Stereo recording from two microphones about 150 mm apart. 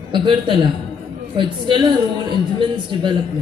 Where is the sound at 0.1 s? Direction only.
35° right (ahead or behind).